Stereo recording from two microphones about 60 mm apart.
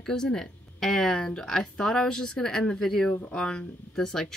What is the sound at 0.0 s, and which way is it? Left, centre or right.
A woman's voice, centre.